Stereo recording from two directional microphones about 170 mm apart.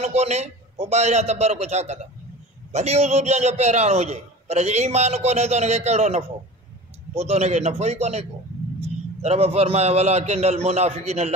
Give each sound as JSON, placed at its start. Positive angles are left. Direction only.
{"t": 0.0, "sound": "a man's voice", "side_deg": -40}